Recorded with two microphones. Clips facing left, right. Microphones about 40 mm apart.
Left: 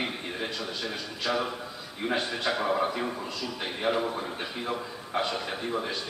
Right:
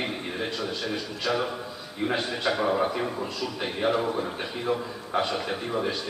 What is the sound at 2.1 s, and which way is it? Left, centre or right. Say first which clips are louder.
Speech: right 1 dB; centre.